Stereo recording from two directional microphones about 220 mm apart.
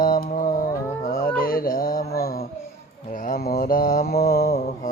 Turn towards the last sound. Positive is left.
turn(degrees=45)  # may be behind; listen again after turning